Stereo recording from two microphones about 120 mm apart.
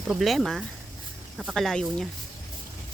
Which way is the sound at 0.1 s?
Centre (ahead or behind).